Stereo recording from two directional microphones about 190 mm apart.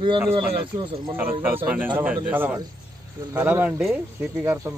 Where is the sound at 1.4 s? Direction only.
10° right (ahead or behind).